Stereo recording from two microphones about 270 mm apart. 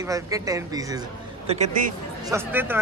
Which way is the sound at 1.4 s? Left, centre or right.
Right.